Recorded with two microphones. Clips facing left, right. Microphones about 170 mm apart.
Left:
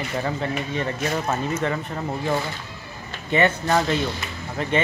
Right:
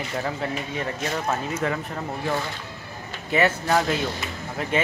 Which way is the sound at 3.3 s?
5° right (ahead or behind).